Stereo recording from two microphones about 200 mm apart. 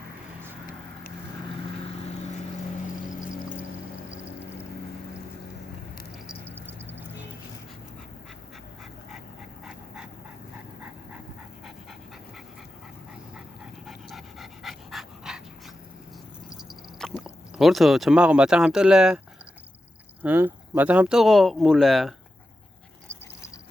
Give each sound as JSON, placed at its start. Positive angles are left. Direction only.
{"t": 2.8, "sound": "vehicle", "side_deg": 40}
{"t": 6.5, "sound": "a sound", "side_deg": -10}
{"t": 9.6, "sound": "dog", "side_deg": -5}
{"t": 13.8, "sound": "dog", "side_deg": 0}
{"t": 16.5, "sound": "a sound", "side_deg": 0}
{"t": 20.2, "sound": "speech", "side_deg": -10}